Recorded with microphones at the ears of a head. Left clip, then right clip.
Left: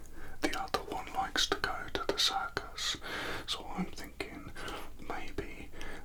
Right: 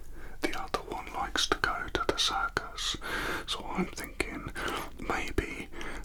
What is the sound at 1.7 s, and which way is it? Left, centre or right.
Whispering, right.